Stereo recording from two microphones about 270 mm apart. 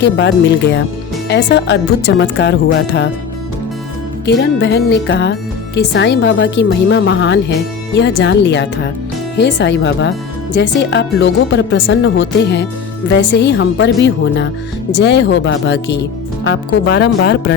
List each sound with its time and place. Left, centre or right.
0.0 s speech: left
4.3 s speech: left